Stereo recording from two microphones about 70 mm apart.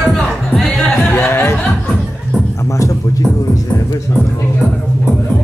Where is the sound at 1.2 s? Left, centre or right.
Left.